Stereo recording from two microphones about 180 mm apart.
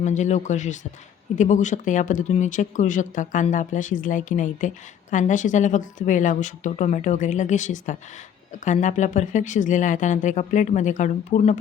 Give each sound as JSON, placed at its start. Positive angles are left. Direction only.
{"t": 0.0, "sound": "speech", "side_deg": 40}